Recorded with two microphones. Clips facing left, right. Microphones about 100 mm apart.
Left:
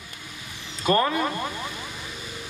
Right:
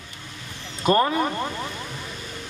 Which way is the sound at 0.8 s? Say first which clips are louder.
Right 2 dB; 25° right (ahead or behind).